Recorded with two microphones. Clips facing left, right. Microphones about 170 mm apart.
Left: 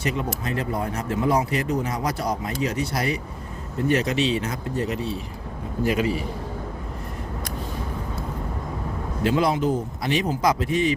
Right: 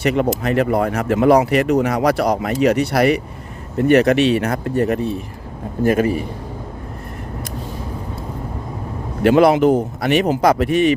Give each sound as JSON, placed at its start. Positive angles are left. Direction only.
{"t": 0.0, "sound": "a man's voice", "side_deg": -70}
{"t": 9.2, "sound": "speech", "side_deg": -70}